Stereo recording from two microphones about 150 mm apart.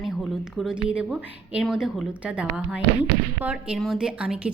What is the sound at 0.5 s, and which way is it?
A woman's voice, 5° right (ahead or behind).